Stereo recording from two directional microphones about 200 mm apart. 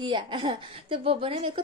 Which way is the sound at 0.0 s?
25° right (ahead or behind).